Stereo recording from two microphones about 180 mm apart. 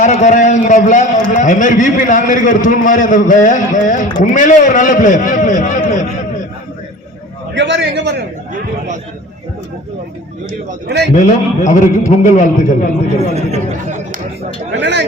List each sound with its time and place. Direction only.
0.0 s a man's voice: 40° left (ahead or behind)
7.5 s a man's voice: 85° right; by 8.2 s 70° right (ahead or behind)
10.8 s speech: 70° right (ahead or behind)
11.2 s a man's voice: 45° left (ahead or behind)
13.3 s speech: 40° right (ahead or behind)
14.7 s speech: 75° right (ahead or behind)